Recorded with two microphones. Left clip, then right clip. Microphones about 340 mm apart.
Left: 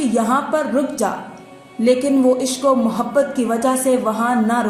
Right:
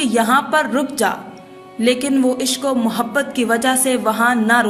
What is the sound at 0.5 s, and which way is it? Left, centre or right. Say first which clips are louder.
A woman's voice: right 2 dB; right.